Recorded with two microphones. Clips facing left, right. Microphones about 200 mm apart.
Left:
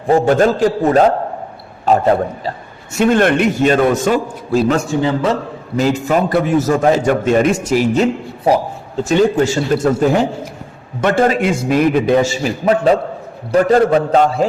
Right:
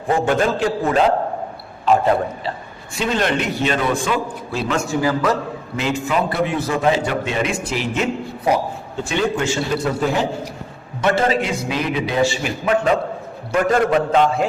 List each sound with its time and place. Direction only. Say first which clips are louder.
0.1 s a man's voice: left 6 dB; 40° left (ahead or behind)
2.9 s a man's voice: left 8 dB; 50° left (ahead or behind)
4.9 s a man's voice: left 3 dB; 25° left (ahead or behind)
5.7 s a man's voice: left 6 dB; 40° left (ahead or behind)
11.3 s a man's voice: left 5 dB; 50° left (ahead or behind)